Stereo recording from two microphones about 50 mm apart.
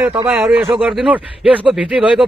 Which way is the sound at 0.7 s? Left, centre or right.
Right.